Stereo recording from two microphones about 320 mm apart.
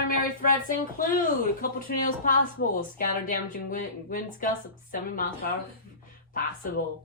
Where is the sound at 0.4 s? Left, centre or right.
Left.